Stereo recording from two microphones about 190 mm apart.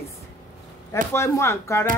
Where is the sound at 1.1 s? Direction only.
15° left (ahead or behind).